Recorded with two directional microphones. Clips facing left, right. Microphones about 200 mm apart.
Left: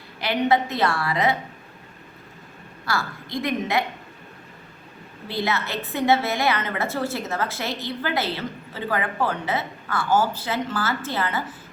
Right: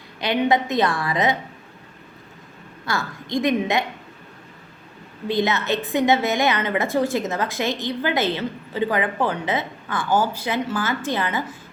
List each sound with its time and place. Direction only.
0.2 s a woman's voice: 20° right (ahead or behind)
2.8 s a woman's voice: 20° right (ahead or behind)
5.3 s a woman's voice: 20° right (ahead or behind)